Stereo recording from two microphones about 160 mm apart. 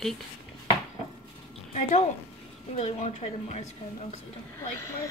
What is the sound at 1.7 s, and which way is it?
A woman's voice, 50° left (ahead or behind).